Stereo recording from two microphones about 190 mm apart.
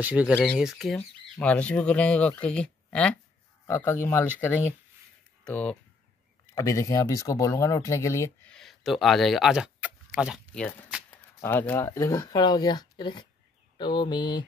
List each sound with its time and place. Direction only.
0.0 s speech: 10° right (ahead or behind)
6.5 s speech: 15° left (ahead or behind)
8.5 s speech: centre (ahead or behind)
10.5 s speech: 5° left (ahead or behind); by 14.4 s 25° left (ahead or behind)